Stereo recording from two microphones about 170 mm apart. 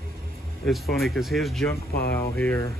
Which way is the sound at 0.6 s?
Centre (ahead or behind).